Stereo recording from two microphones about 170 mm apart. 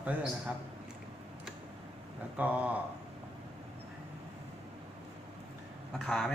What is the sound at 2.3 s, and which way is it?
Speech, 10° right (ahead or behind).